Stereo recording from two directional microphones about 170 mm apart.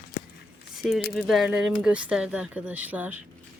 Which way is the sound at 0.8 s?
Centre (ahead or behind).